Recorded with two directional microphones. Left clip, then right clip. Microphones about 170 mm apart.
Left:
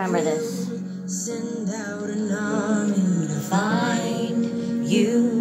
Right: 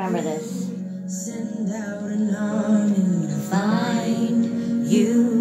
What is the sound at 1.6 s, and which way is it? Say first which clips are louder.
Music: even; 40° left (ahead or behind).